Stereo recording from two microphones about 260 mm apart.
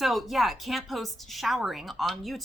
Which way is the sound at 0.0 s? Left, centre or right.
Centre.